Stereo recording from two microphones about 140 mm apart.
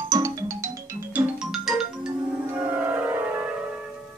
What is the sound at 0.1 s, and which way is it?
Music, 20° right (ahead or behind).